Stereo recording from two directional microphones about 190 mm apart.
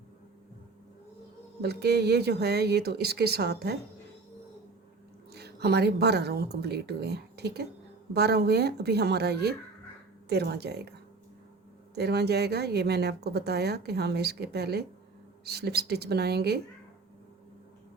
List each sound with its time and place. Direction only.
1.6 s a woman's voice: 60° right (ahead or behind)
5.3 s a woman's voice: 60° right (ahead or behind)
11.9 s a woman's voice: 60° right (ahead or behind)